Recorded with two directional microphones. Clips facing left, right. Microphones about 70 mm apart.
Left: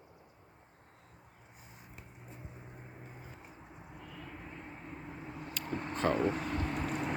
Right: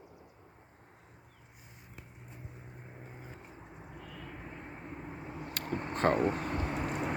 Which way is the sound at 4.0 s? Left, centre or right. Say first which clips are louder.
Right 1 dB; centre.